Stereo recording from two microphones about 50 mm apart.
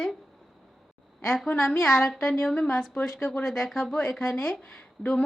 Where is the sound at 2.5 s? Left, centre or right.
Left.